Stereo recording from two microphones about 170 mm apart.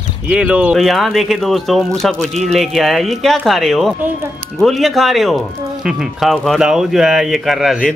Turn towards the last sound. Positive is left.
turn(degrees=0)  # may be behind; listen again after turning